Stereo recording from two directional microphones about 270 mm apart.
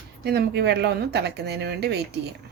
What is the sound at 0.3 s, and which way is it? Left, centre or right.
A woman's voice, right.